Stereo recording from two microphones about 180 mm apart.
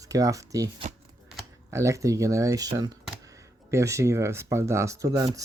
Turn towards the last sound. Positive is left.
turn(degrees=-20)  # may be behind; listen again after turning